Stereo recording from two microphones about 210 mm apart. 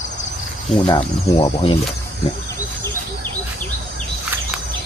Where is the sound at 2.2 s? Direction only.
25° left (ahead or behind).